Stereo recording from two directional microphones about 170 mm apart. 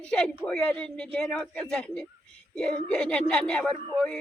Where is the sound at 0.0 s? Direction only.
5° left (ahead or behind).